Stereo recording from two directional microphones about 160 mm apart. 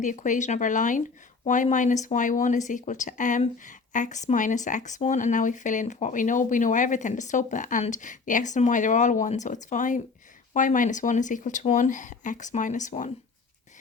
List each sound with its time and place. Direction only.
0.0 s speech: 50° left (ahead or behind)